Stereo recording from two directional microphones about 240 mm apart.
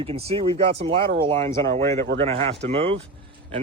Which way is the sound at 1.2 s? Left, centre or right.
Right.